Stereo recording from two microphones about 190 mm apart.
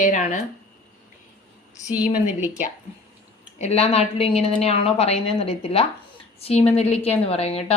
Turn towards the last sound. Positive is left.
turn(degrees=30)  # may be behind; listen again after turning